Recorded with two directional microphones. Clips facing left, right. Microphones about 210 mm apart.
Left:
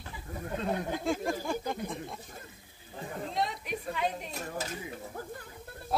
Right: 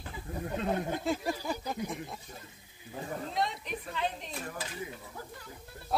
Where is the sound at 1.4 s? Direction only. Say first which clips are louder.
Left 2 dB; 5° right (ahead or behind).